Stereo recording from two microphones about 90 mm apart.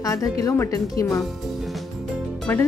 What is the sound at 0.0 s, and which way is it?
A woman's voice, 40° left (ahead or behind).